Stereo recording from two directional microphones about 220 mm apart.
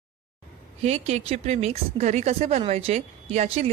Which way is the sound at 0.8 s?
30° right (ahead or behind).